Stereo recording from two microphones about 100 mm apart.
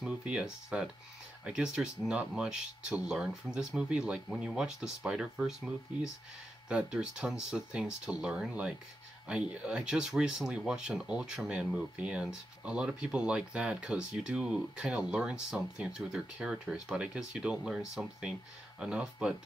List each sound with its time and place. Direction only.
0.0 s speech: 10° right (ahead or behind)